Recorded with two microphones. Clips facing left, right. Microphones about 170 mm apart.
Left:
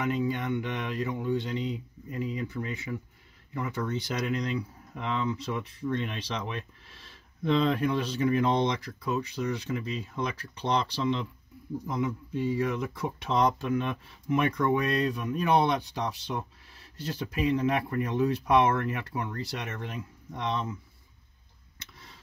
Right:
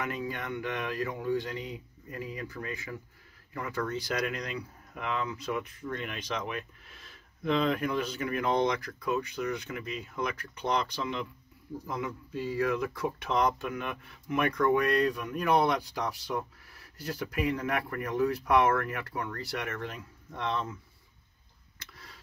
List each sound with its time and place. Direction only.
0.0 s speech: 20° left (ahead or behind)